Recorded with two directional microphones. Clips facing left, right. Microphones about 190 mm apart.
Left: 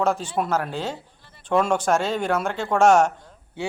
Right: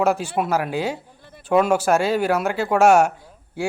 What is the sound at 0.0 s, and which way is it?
Speech, 10° right (ahead or behind).